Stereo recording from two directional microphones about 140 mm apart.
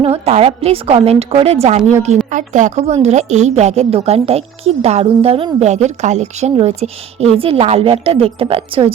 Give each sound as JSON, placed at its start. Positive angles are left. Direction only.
{"t": 0.0, "sound": "a woman's voice", "side_deg": -45}